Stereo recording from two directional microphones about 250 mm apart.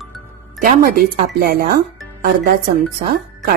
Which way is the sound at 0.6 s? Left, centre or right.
Right.